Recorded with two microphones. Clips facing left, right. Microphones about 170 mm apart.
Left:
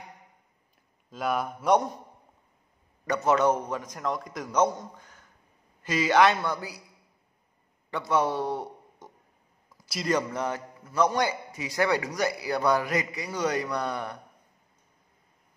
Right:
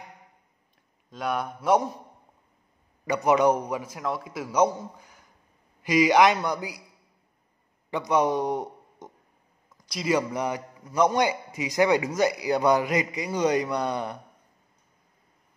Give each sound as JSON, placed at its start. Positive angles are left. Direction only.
{"t": 1.1, "sound": "speech", "side_deg": 0}
{"t": 3.1, "sound": "a man's voice", "side_deg": -15}
{"t": 7.9, "sound": "a man's voice", "side_deg": -15}
{"t": 9.8, "sound": "a sound", "side_deg": 5}
{"t": 10.0, "sound": "a man's voice", "side_deg": -10}